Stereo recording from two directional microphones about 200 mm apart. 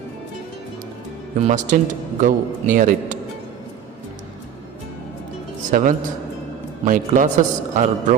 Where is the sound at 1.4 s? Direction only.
35° right (ahead or behind).